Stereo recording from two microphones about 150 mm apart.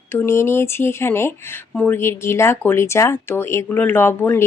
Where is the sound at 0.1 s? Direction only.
15° left (ahead or behind).